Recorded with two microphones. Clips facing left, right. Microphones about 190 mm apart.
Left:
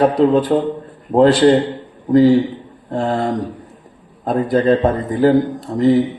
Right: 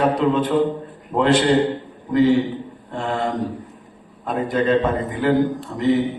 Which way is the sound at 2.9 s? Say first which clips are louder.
Left 5 dB; 35° left (ahead or behind).